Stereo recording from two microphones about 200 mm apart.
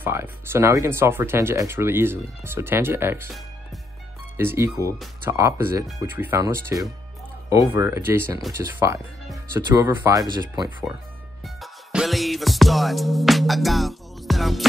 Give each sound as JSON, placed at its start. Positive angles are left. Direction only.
{"t": 0.0, "sound": "speech", "side_deg": -10}
{"t": 4.4, "sound": "speech", "side_deg": -15}
{"t": 11.4, "sound": "music", "side_deg": 0}